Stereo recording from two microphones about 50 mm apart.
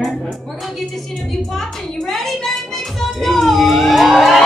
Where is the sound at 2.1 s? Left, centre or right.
Centre.